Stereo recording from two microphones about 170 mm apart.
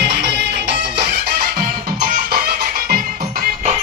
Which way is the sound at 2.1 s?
65° right (ahead or behind).